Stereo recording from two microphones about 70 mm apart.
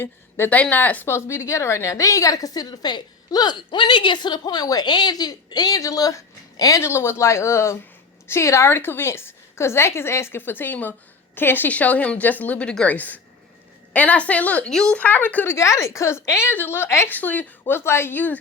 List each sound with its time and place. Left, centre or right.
0.0 s a woman's voice: left
0.5 s speech: left
1.0 s a woman's voice: left
6.8 s a woman's voice: left; by 14.7 s centre
14.7 s speech: centre
14.9 s speech: left
15.4 s a woman's voice: left
17.1 s speech: left
17.7 s a woman's voice: left